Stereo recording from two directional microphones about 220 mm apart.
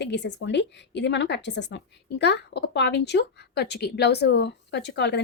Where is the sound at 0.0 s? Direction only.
50° left (ahead or behind).